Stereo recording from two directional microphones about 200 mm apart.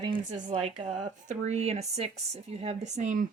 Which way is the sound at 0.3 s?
30° right (ahead or behind).